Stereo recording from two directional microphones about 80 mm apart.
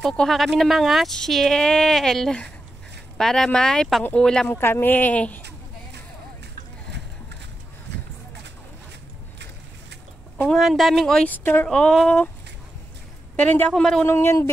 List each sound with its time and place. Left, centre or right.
0.0 s speech: centre
4.6 s speech: left
10.5 s speech: centre
11.2 s speech: left
11.7 s speech: centre
13.4 s speech: left
14.0 s speech: left